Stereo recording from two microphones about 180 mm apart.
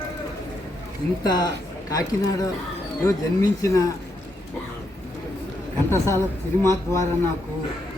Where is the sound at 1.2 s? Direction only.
25° left (ahead or behind).